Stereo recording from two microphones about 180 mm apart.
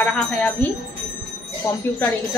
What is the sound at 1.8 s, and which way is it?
Speech, 10° left (ahead or behind).